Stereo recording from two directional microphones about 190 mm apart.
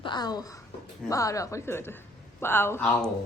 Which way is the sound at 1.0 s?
15° left (ahead or behind).